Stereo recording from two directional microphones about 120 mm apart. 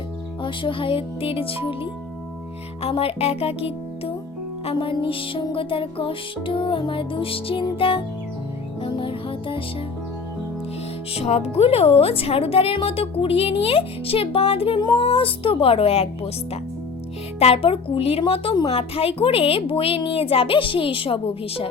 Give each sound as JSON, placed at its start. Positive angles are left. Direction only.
{"t": 0.4, "sound": "music", "side_deg": 45}
{"t": 2.8, "sound": "speech", "side_deg": 55}
{"t": 4.6, "sound": "music", "side_deg": 45}
{"t": 11.1, "sound": "music", "side_deg": 60}
{"t": 14.8, "sound": "music", "side_deg": 35}
{"t": 15.0, "sound": "music", "side_deg": 50}
{"t": 17.4, "sound": "music", "side_deg": 55}